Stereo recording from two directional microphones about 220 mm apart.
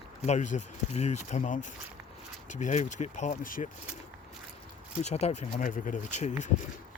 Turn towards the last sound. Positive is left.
turn(degrees=30)  # may be behind; listen again after turning